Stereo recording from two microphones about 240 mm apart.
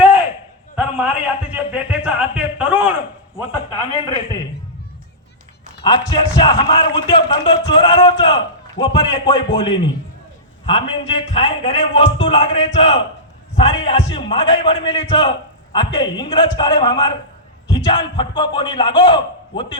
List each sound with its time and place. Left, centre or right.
0.8 s a sound: centre
3.3 s a man's voice: centre
5.8 s a man's voice: left